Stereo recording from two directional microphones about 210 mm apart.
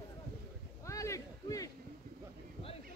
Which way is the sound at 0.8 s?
15° left (ahead or behind).